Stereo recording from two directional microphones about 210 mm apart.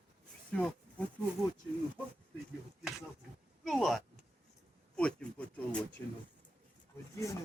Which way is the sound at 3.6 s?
Centre (ahead or behind).